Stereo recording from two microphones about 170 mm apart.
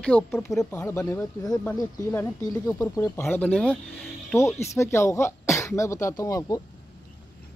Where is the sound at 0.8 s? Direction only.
15° left (ahead or behind).